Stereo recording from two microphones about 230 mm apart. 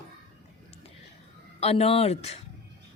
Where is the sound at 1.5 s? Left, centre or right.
Left.